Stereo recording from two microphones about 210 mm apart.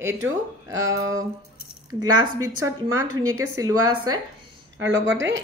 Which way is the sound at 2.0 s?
15° right (ahead or behind).